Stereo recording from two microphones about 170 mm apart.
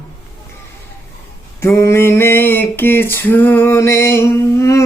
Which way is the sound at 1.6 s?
15° left (ahead or behind).